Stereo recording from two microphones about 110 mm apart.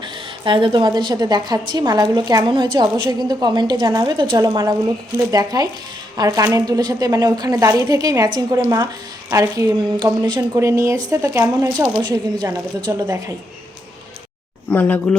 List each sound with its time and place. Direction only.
0.0 s a woman's voice: 50° right (ahead or behind)
4.4 s a woman's voice: 35° right (ahead or behind)
10.0 s speech: 45° right (ahead or behind)
10.6 s a woman's voice: 25° right (ahead or behind)
14.7 s speech: 15° left (ahead or behind)